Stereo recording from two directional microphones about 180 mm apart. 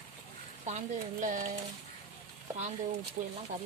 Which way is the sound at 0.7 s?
40° right (ahead or behind).